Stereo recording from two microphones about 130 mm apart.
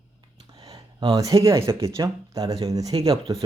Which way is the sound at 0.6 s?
30° right (ahead or behind).